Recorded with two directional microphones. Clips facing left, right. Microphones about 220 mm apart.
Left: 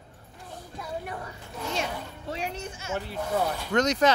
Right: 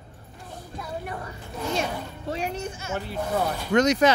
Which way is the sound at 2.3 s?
45° right (ahead or behind).